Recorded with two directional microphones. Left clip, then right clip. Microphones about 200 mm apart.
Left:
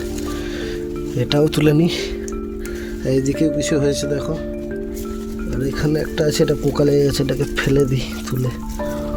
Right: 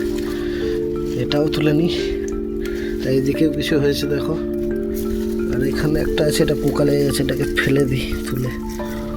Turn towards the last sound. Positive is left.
turn(degrees=20)  # may be behind; listen again after turning